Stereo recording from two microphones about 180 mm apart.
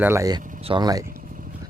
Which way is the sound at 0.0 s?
15° right (ahead or behind).